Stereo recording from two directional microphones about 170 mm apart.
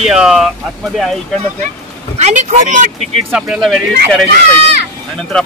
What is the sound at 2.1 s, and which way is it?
Speech, 40° right (ahead or behind).